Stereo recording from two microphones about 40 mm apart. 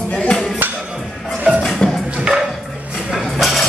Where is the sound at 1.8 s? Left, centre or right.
Left.